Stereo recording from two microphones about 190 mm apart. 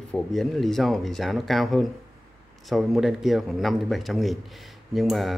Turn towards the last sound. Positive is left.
turn(degrees=0)  # may be behind; listen again after turning